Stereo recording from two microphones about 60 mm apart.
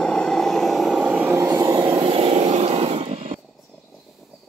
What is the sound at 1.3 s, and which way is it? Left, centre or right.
Vehicle, right.